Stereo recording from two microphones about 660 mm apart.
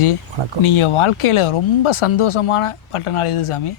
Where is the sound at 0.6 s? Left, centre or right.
Left.